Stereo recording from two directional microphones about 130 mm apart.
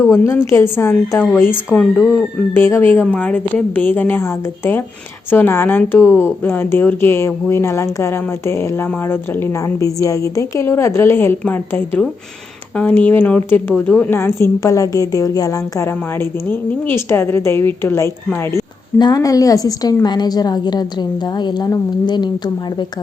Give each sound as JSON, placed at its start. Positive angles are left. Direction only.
{"t": 0.1, "sound": "a woman's voice", "side_deg": 20}
{"t": 18.9, "sound": "a woman's voice", "side_deg": 30}